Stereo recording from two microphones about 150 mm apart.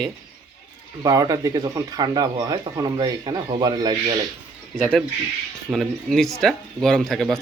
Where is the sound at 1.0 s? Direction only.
25° right (ahead or behind).